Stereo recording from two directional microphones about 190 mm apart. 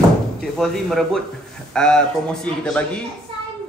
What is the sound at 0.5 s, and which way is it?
A man's voice, centre (ahead or behind).